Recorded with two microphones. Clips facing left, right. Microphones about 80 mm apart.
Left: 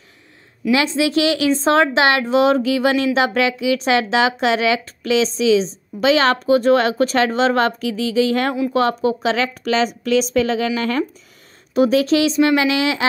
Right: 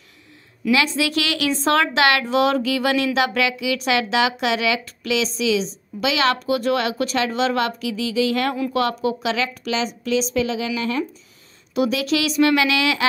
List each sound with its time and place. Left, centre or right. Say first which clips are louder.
0.7 s a woman's voice: left 3 dB; left
11.7 s speech: left 6 dB; left